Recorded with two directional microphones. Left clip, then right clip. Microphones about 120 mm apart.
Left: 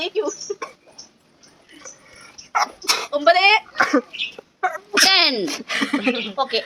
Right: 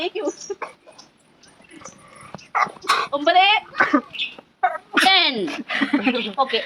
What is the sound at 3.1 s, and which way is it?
Speech, 70° left (ahead or behind).